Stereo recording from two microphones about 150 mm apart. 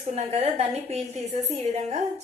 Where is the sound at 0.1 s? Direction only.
45° right (ahead or behind).